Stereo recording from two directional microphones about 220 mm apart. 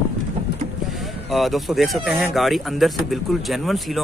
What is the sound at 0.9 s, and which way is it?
Speech, centre (ahead or behind).